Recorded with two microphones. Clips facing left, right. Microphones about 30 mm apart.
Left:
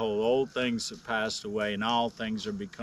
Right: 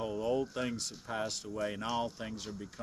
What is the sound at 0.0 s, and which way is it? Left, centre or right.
Speech, left.